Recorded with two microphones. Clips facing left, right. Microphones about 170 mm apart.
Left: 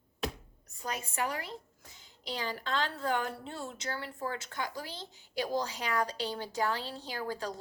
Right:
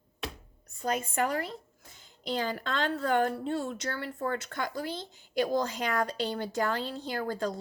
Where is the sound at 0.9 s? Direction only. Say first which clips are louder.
Right 6 dB; 55° right (ahead or behind).